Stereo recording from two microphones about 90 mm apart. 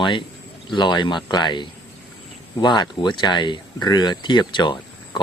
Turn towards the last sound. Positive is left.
turn(degrees=60)  # may be behind; listen again after turning